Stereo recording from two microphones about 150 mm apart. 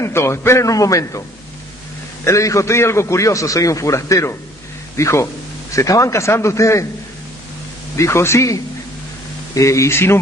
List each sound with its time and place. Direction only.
0.0 s a man's voice: 15° left (ahead or behind)
2.2 s a man's voice: 20° left (ahead or behind)
7.9 s a man's voice: 20° left (ahead or behind)